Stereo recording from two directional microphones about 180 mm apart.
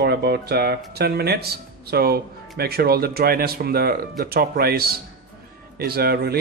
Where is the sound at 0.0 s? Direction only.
60° right (ahead or behind).